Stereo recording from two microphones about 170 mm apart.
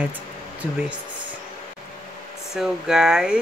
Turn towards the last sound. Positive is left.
turn(degrees=-5)  # may be behind; listen again after turning